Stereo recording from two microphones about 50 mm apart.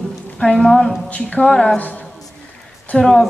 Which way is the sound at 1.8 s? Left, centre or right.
Left.